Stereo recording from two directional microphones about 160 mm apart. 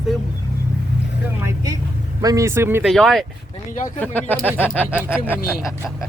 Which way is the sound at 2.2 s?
20° right (ahead or behind).